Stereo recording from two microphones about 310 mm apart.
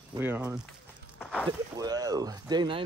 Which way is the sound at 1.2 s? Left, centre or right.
Centre.